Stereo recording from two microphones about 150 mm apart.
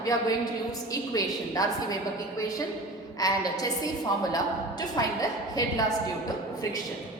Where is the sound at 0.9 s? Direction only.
25° left (ahead or behind).